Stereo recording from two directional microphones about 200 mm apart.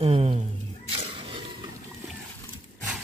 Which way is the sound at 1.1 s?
25° right (ahead or behind).